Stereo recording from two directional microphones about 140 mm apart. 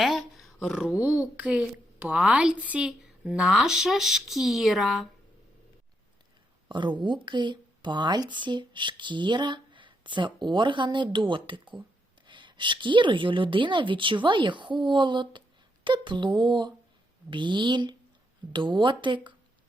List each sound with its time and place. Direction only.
0.0 s speech: centre (ahead or behind)
6.7 s speech: 35° right (ahead or behind)